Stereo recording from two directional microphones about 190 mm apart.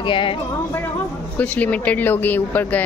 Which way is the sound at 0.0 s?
25° left (ahead or behind).